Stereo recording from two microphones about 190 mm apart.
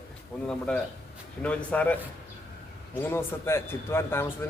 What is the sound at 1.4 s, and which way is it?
Speech, 5° left (ahead or behind).